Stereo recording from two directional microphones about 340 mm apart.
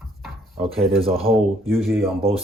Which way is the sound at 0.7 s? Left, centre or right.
Centre.